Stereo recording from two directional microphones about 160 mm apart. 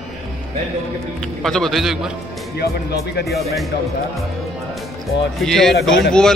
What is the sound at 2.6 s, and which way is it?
Speech, 85° left.